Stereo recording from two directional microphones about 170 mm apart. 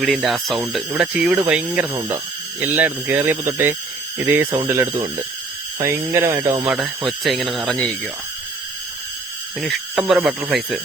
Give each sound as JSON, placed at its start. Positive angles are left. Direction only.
{"t": 0.0, "sound": "speech", "side_deg": 0}
{"t": 6.7, "sound": "speech", "side_deg": -5}
{"t": 9.6, "sound": "speech", "side_deg": 0}